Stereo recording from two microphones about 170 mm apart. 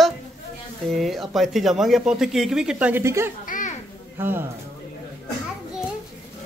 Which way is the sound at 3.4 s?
50° left (ahead or behind).